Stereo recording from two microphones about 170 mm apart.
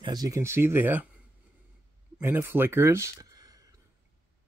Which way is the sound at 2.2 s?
15° right (ahead or behind).